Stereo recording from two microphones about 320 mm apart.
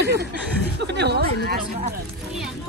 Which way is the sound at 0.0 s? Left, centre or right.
Right.